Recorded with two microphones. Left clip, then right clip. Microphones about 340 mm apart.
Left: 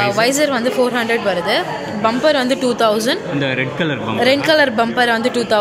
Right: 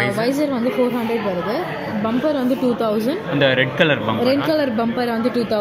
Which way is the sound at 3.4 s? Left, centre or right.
Centre.